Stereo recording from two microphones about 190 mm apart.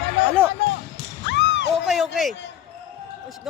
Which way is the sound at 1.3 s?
70° left (ahead or behind).